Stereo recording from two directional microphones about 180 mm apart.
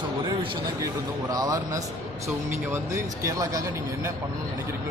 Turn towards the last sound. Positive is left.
turn(degrees=-20)  # may be behind; listen again after turning